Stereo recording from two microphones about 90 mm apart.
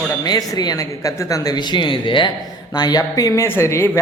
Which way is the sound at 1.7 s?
65° left (ahead or behind).